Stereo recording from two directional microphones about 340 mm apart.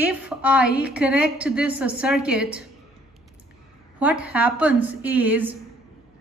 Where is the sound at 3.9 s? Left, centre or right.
Centre.